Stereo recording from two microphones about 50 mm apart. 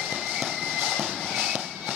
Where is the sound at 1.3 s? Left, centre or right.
Centre.